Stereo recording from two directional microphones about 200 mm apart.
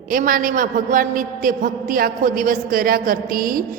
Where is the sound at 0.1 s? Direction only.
45° right (ahead or behind).